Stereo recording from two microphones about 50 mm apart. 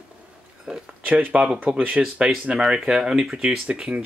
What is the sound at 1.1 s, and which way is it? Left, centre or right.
Speech, right.